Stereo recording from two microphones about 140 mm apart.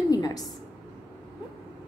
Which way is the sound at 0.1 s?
25° left (ahead or behind).